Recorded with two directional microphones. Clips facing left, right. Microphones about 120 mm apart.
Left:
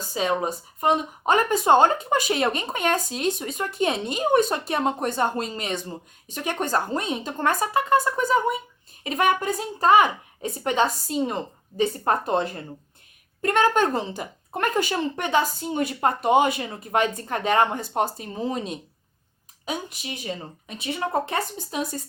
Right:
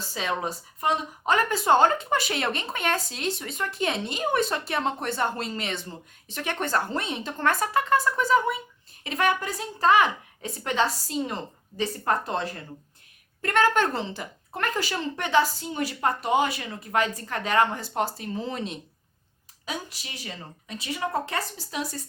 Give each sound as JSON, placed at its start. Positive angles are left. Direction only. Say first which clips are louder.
{"t": 0.1, "sound": "a woman's voice", "louder": "left 5 dB", "side_deg": 20}